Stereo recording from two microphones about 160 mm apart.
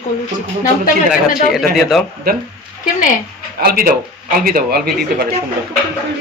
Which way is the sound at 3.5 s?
65° right (ahead or behind).